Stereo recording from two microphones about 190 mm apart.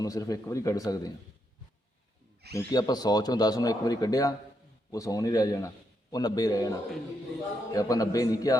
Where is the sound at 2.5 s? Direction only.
20° left (ahead or behind).